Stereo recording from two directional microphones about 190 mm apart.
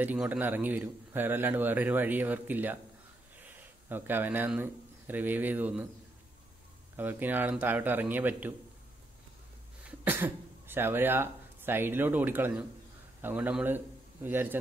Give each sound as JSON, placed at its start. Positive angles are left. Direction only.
{"t": 0.0, "sound": "a man's voice", "side_deg": -10}
{"t": 7.0, "sound": "a man's voice", "side_deg": -10}
{"t": 9.8, "sound": "a man's voice", "side_deg": -10}